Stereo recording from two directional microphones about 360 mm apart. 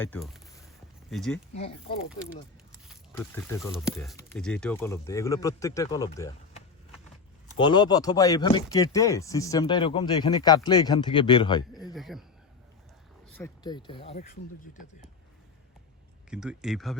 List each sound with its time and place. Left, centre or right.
0.0 s speech: centre
1.5 s speech: centre
2.9 s speech: centre
11.9 s speech: centre
13.2 s speech: centre
16.3 s speech: centre